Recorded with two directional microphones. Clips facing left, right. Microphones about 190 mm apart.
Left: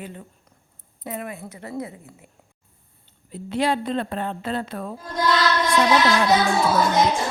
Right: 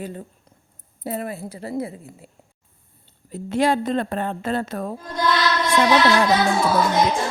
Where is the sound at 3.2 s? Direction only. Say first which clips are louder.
Right 3 dB; 45° right (ahead or behind).